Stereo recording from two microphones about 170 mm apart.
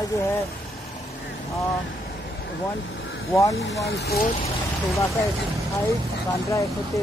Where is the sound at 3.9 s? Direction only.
70° left (ahead or behind).